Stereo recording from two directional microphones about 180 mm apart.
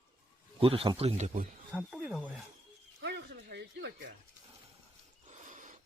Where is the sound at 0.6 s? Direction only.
30° right (ahead or behind).